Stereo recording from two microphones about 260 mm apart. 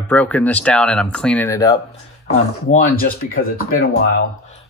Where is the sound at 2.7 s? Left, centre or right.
Left.